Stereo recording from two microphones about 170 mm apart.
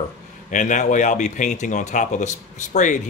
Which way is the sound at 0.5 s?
45° left (ahead or behind).